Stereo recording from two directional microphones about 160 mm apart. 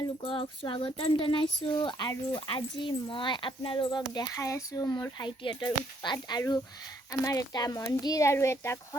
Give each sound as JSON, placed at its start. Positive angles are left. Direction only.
{"t": 0.2, "sound": "speech", "side_deg": 35}